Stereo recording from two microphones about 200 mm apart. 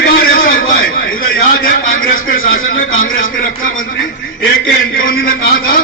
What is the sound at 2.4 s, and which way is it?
Speech, 80° left.